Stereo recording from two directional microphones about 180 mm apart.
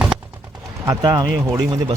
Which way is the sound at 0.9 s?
20° right (ahead or behind).